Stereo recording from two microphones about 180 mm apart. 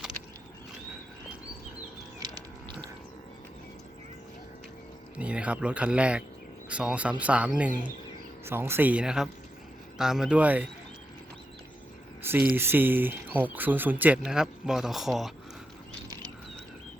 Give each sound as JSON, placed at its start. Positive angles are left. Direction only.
{"t": 2.1, "sound": "a sound", "side_deg": -20}
{"t": 5.1, "sound": "speech", "side_deg": -5}
{"t": 12.5, "sound": "speech", "side_deg": -10}